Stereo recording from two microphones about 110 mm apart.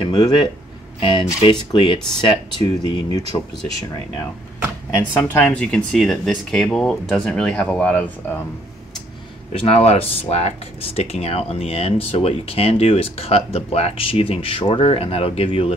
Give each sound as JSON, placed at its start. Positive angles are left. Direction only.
{"t": 0.0, "sound": "speech", "side_deg": 40}
{"t": 5.1, "sound": "speech", "side_deg": 10}
{"t": 9.5, "sound": "speech", "side_deg": 60}